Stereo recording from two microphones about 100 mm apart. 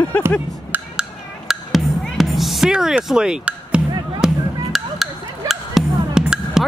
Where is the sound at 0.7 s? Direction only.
5° right (ahead or behind).